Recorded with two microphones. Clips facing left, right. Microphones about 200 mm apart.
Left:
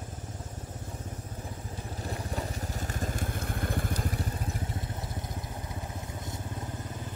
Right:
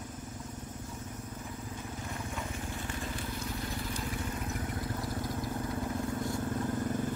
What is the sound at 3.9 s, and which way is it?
Vehicle, 40° left (ahead or behind).